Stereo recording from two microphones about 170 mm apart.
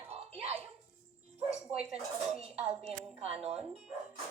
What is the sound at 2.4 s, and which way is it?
A woman's voice, 35° right (ahead or behind).